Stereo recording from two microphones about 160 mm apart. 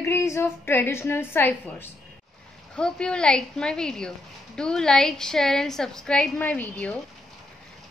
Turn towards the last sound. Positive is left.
turn(degrees=5)  # may be behind; listen again after turning